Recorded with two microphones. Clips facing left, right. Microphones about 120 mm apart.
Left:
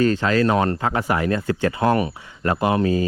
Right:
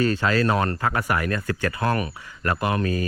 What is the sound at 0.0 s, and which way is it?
Speech, 20° left (ahead or behind).